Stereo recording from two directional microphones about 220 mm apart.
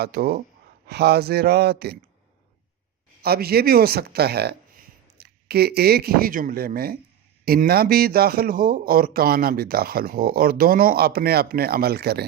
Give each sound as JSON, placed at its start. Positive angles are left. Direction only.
{"t": 0.0, "sound": "speech", "side_deg": -45}
{"t": 3.2, "sound": "speech", "side_deg": -45}